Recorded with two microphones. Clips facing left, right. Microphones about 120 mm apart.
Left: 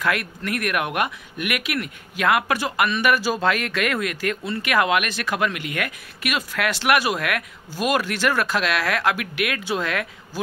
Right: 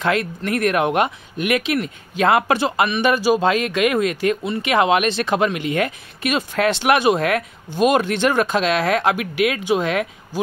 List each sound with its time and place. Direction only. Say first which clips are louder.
0.0 s speech: right 4 dB; 25° right (ahead or behind)